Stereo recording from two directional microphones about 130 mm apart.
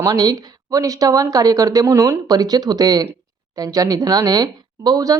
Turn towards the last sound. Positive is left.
turn(degrees=-30)  # may be behind; listen again after turning